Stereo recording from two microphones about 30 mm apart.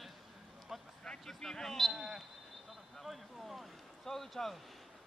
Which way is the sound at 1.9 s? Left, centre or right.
Centre.